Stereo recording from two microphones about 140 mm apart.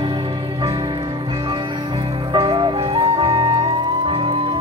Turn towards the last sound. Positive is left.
turn(degrees=-40)  # may be behind; listen again after turning